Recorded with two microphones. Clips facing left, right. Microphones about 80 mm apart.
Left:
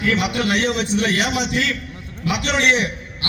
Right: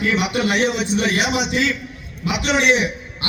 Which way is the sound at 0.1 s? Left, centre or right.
Centre.